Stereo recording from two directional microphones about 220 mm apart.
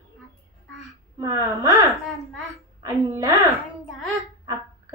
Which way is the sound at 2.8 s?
15° right (ahead or behind).